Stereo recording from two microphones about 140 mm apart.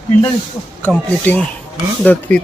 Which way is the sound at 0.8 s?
10° left (ahead or behind).